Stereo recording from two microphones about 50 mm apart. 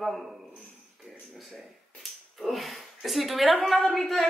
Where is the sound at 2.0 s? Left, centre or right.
Centre.